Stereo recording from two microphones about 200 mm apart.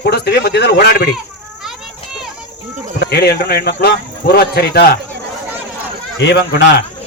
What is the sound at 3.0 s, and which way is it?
A man's voice, 55° left (ahead or behind).